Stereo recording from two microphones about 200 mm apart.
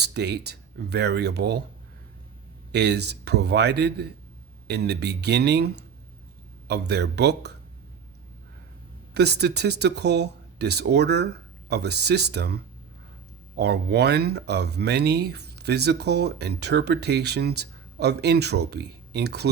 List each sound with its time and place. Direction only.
0.0 s speech: 55° right (ahead or behind)
2.7 s speech: 55° right (ahead or behind)
9.1 s speech: 55° right (ahead or behind)